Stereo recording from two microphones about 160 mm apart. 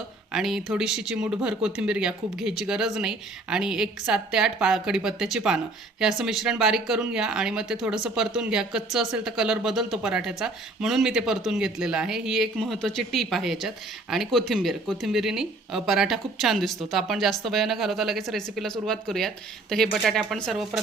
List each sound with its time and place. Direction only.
0.3 s speech: 5° right (ahead or behind)